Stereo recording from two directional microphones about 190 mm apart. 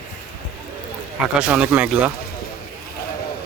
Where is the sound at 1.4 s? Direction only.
5° right (ahead or behind).